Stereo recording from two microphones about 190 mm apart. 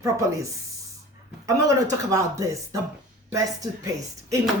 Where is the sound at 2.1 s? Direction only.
15° right (ahead or behind).